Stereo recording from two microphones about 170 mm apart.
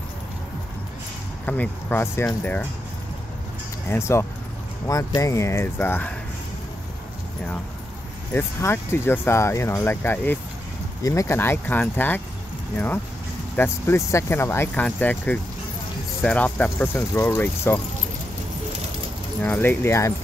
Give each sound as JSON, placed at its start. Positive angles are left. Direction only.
{"t": 1.4, "sound": "speech", "side_deg": 10}
{"t": 3.9, "sound": "speech", "side_deg": 15}
{"t": 8.3, "sound": "speech", "side_deg": 15}
{"t": 19.4, "sound": "speech", "side_deg": 10}